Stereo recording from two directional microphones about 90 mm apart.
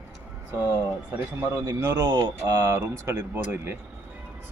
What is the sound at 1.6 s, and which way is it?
Speech, 40° right (ahead or behind).